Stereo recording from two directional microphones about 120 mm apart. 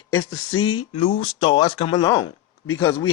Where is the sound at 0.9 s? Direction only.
50° left (ahead or behind).